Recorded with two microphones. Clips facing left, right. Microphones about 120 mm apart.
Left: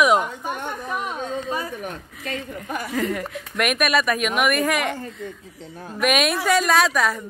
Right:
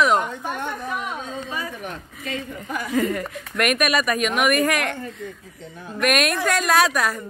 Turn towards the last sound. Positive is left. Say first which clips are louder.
# even
turn(degrees=0)  # may be behind; listen again after turning